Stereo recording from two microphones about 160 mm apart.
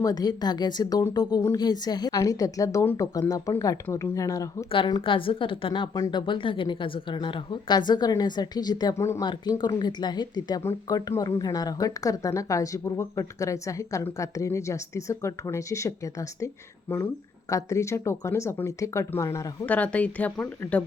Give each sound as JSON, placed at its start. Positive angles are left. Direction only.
{"t": 0.0, "sound": "a woman's voice", "side_deg": 25}
{"t": 4.7, "sound": "a woman's voice", "side_deg": 30}